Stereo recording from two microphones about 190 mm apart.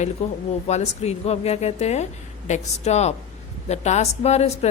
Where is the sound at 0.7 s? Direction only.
35° left (ahead or behind).